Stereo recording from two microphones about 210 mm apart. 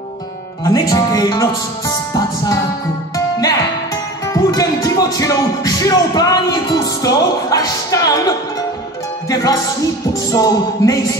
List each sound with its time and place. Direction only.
0.7 s music: 15° left (ahead or behind)
4.3 s music: 15° left (ahead or behind)